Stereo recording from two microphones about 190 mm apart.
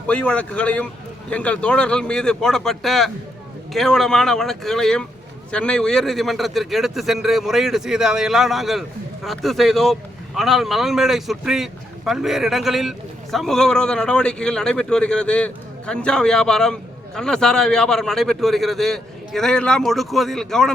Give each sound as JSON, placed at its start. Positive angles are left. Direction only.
{"t": 0.1, "sound": "a man's voice", "side_deg": 5}